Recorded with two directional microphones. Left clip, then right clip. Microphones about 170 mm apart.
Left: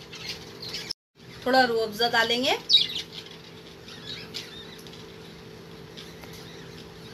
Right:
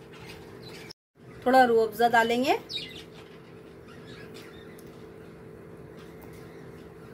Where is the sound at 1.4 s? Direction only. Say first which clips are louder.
Right 2 dB; 50° right (ahead or behind).